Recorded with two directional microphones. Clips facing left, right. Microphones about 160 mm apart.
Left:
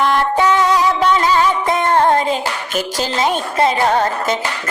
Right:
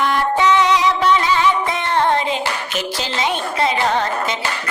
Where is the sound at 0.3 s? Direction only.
45° left (ahead or behind).